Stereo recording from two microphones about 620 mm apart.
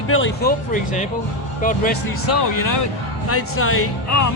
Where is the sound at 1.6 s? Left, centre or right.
Centre.